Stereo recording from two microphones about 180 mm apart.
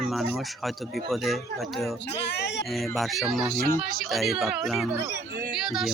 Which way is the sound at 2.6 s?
Centre (ahead or behind).